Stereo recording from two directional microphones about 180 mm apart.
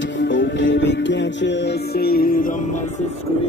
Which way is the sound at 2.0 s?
55° left (ahead or behind).